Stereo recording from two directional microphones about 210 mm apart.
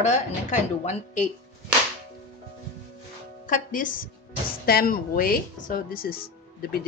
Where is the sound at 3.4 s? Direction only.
40° left (ahead or behind).